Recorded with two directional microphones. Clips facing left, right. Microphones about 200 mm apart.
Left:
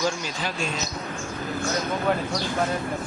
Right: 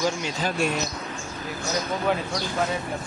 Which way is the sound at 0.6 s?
60° right (ahead or behind).